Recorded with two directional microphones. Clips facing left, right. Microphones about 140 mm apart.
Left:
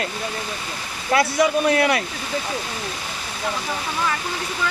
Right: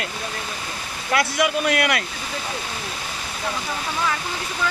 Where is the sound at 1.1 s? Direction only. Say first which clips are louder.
Left 3 dB; 30° left (ahead or behind).